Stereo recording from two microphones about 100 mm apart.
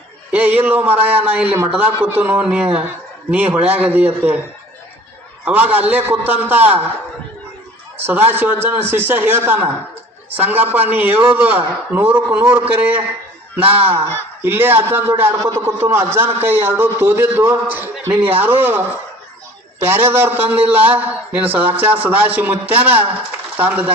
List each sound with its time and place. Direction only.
0.3 s a man's voice: 15° right (ahead or behind)
5.5 s a man's voice: 15° right (ahead or behind)
7.9 s a man's voice: 20° right (ahead or behind)
19.8 s a man's voice: 20° right (ahead or behind)